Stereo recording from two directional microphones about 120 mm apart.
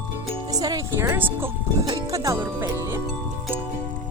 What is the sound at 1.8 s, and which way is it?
Speech, 30° right (ahead or behind).